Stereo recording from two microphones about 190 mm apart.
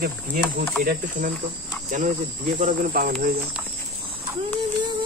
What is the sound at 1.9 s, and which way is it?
Cricket, 40° right (ahead or behind).